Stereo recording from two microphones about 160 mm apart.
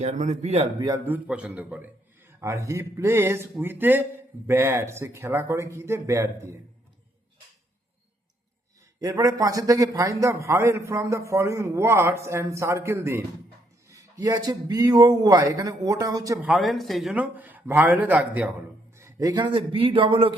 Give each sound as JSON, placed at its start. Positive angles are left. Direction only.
{"t": 0.0, "sound": "speech", "side_deg": -45}
{"t": 0.8, "sound": "speech", "side_deg": -20}
{"t": 1.0, "sound": "a man's voice", "side_deg": -10}
{"t": 9.0, "sound": "a man's voice", "side_deg": -20}
{"t": 16.4, "sound": "a man's voice", "side_deg": 0}